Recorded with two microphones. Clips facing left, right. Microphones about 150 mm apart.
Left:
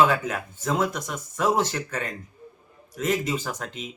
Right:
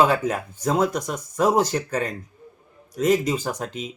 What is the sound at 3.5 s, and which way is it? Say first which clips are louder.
Speech: right 5 dB; 10° right (ahead or behind).